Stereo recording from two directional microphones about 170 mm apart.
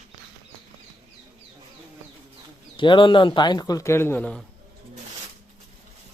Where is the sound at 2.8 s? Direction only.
30° left (ahead or behind); by 4.4 s 10° left (ahead or behind).